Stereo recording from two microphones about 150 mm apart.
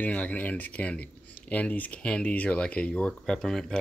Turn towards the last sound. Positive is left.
turn(degrees=5)  # may be behind; listen again after turning